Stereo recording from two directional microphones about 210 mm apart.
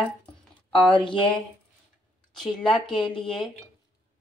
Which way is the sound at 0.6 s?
5° left (ahead or behind).